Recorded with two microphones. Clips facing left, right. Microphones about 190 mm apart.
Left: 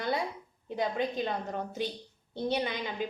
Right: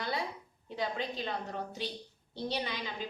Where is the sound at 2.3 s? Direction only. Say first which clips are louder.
Left 5 dB; 50° left (ahead or behind).